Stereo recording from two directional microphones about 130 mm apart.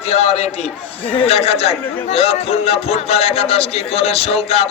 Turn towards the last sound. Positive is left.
turn(degrees=50)  # may be behind; listen again after turning